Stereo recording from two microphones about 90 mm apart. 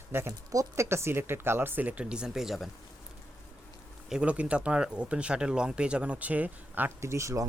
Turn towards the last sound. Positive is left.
turn(degrees=-35)  # may be behind; listen again after turning